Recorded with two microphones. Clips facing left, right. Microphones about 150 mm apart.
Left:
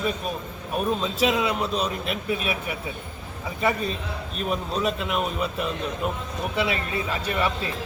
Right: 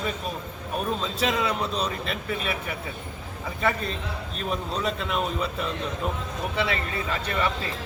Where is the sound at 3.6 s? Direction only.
10° left (ahead or behind).